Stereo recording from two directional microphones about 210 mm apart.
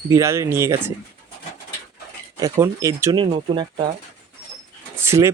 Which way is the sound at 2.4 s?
15° right (ahead or behind).